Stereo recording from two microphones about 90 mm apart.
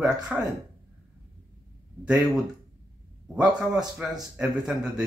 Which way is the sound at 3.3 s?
10° right (ahead or behind).